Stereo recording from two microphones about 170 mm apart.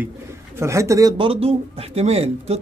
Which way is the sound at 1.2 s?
35° right (ahead or behind).